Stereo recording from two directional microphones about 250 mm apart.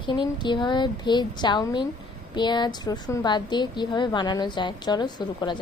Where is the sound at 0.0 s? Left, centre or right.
Centre.